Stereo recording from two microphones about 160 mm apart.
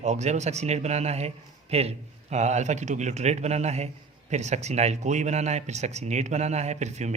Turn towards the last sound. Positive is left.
turn(degrees=-45)  # may be behind; listen again after turning